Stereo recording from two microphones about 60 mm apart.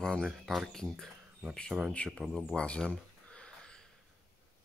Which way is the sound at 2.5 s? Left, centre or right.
Centre.